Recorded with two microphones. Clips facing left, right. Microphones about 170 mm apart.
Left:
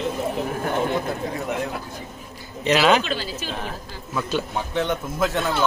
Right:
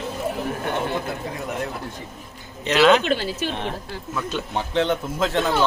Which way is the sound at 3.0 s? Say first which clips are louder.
Right 5 dB; 55° right (ahead or behind).